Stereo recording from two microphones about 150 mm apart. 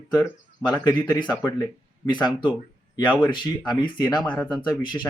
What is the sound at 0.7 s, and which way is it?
Speech, 25° left (ahead or behind).